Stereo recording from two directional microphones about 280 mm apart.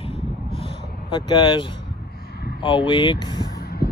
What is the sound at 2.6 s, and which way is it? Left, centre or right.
Speech, centre.